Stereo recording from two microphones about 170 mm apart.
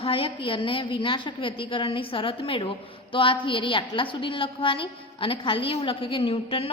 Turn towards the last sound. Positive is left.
turn(degrees=30)  # may be behind; listen again after turning